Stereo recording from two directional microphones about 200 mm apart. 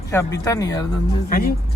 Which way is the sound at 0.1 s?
15° left (ahead or behind).